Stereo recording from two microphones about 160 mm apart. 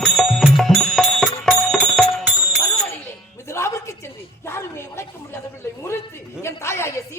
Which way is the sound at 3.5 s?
15° left (ahead or behind).